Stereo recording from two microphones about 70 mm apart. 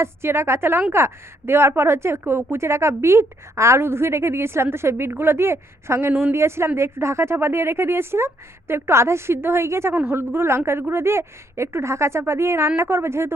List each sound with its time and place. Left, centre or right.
0.0 s a woman's voice: right
9.9 s speech: right
10.2 s a woman's voice: right